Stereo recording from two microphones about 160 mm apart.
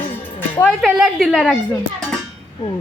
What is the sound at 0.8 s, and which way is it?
Speech, centre (ahead or behind).